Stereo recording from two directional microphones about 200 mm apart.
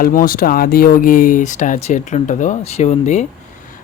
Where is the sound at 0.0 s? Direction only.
45° left (ahead or behind).